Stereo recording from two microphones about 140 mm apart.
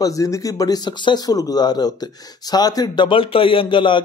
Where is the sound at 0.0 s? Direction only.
25° left (ahead or behind).